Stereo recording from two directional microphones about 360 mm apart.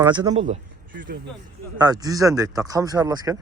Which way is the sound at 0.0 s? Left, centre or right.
Centre.